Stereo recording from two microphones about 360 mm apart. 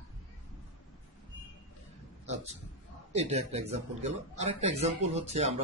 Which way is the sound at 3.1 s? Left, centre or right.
Centre.